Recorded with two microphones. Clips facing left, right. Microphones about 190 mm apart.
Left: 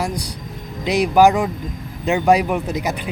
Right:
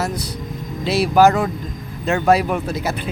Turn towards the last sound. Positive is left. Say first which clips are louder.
# even
turn(degrees=15)  # may be behind; listen again after turning